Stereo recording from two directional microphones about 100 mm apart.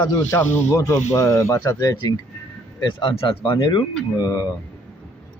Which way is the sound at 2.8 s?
65° left (ahead or behind).